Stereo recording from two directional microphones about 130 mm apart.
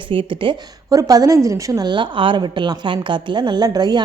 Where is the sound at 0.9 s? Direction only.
30° right (ahead or behind).